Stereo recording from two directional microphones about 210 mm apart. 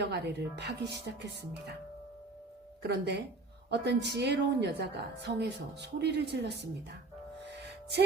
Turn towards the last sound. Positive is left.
turn(degrees=-55)  # may be behind; listen again after turning